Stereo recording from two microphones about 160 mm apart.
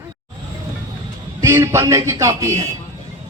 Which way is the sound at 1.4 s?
15° right (ahead or behind).